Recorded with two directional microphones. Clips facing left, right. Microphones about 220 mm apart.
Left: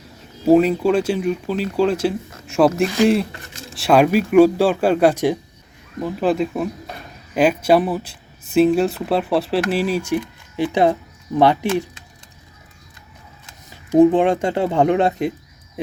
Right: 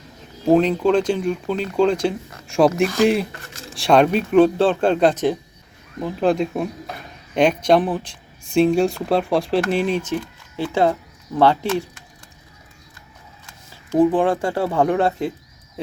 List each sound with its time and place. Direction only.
0.4 s speech: 5° left (ahead or behind)
13.5 s speech: 20° left (ahead or behind)